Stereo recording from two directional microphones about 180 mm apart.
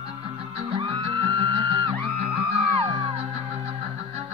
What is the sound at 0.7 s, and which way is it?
Music, 30° right (ahead or behind).